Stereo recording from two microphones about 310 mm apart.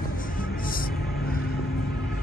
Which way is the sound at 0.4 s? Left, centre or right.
Left.